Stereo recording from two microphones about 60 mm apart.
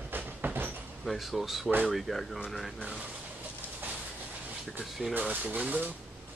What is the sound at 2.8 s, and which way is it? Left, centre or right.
Speech, centre.